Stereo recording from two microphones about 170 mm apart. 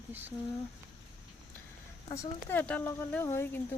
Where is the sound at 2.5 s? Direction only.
10° left (ahead or behind).